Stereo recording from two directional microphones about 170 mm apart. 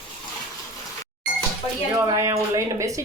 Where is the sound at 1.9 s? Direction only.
20° right (ahead or behind).